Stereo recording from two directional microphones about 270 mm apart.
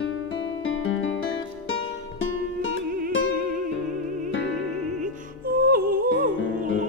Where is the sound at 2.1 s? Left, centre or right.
Left.